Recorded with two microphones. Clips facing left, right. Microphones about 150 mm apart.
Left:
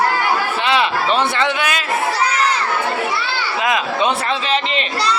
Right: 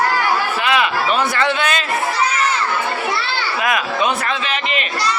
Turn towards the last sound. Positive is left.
turn(degrees=25)  # may be behind; listen again after turning